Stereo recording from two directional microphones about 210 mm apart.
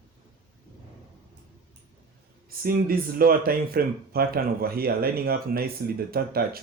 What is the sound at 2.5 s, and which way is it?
Speech, 45° right (ahead or behind).